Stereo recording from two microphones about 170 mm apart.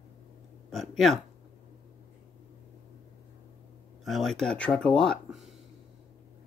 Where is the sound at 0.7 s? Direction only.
Centre (ahead or behind).